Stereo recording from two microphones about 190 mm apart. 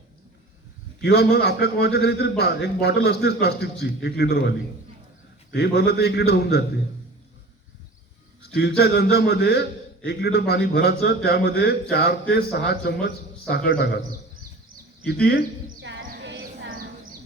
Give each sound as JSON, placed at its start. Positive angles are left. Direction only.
{"t": 1.0, "sound": "a man's voice", "side_deg": 60}
{"t": 5.5, "sound": "a man's voice", "side_deg": 60}
{"t": 8.8, "sound": "a man's voice", "side_deg": 55}
{"t": 15.0, "sound": "a man's voice", "side_deg": 60}
{"t": 15.8, "sound": "horse", "side_deg": -70}
{"t": 16.0, "sound": "a sound", "side_deg": -60}